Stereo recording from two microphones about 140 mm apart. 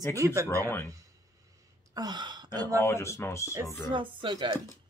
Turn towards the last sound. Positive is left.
turn(degrees=-35)  # may be behind; listen again after turning